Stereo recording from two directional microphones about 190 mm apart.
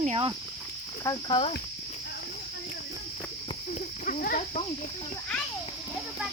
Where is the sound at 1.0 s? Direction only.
20° left (ahead or behind).